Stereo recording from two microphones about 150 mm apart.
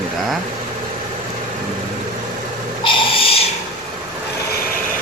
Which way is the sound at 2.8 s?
35° left (ahead or behind).